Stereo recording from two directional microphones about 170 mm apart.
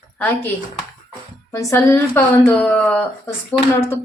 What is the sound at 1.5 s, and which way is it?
A woman's voice, 15° left (ahead or behind).